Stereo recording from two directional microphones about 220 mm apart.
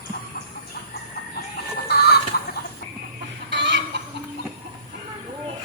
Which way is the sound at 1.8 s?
45° left (ahead or behind).